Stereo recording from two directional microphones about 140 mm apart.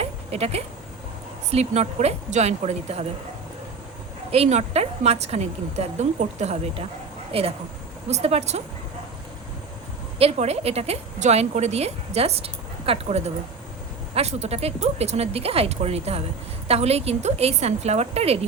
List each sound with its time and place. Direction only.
0.0 s a sound: 45° right (ahead or behind)
1.5 s a woman's voice: 50° right (ahead or behind)
4.3 s a woman's voice: 50° right (ahead or behind)
10.2 s a woman's voice: 45° right (ahead or behind)